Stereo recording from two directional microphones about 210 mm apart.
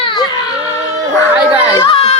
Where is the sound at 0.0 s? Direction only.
25° left (ahead or behind).